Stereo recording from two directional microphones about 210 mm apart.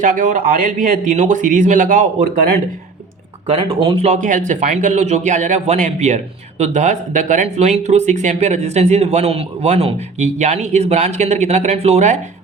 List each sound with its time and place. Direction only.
0.0 s speech: 40° right (ahead or behind)
3.4 s speech: 25° right (ahead or behind)